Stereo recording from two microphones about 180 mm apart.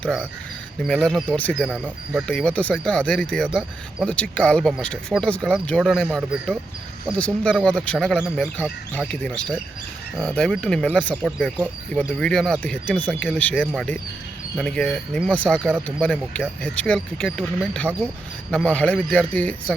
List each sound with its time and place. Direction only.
0.8 s speech: 5° left (ahead or behind)
11.1 s speech: 5° right (ahead or behind)